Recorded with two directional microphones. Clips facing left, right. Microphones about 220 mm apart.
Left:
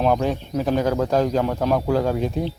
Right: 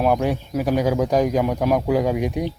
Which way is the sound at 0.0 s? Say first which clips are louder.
Right 1 dB; 10° right (ahead or behind).